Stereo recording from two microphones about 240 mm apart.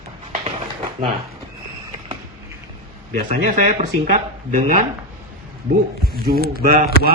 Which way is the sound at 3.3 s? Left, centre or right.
Right.